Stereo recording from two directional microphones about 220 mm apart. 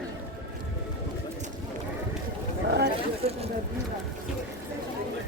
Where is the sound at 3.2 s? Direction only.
25° right (ahead or behind).